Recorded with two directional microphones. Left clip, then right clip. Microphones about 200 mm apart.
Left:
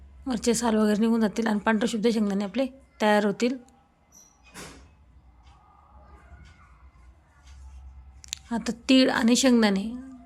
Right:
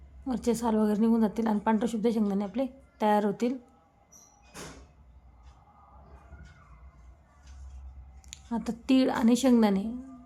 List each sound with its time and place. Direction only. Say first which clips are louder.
0.3 s a woman's voice: left 4 dB; 5° left (ahead or behind)
8.2 s a woman's voice: left 4 dB; 5° left (ahead or behind)